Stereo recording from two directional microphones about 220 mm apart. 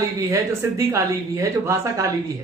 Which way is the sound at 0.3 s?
10° right (ahead or behind).